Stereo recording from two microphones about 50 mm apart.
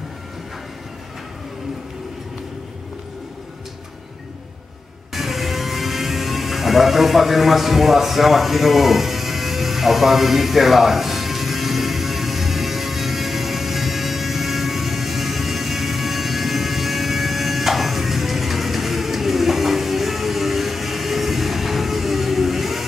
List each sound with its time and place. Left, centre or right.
5.1 s music: centre